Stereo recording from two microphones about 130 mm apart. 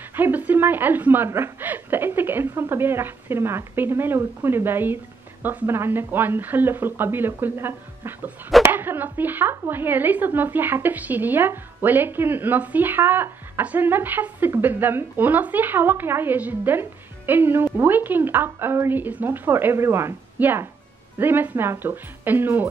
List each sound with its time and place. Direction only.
0.1 s a woman's voice: 15° right (ahead or behind)